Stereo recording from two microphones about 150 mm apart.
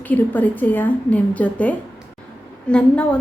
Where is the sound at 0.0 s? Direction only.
10° left (ahead or behind).